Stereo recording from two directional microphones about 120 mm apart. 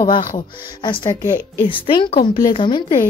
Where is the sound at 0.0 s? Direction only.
40° left (ahead or behind).